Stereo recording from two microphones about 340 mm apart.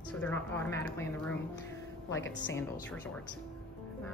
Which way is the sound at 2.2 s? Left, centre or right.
Left.